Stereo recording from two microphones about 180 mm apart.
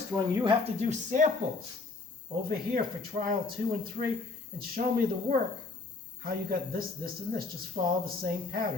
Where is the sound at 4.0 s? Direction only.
40° right (ahead or behind).